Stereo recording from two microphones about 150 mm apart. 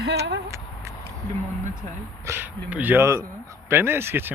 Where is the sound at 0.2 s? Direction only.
20° right (ahead or behind).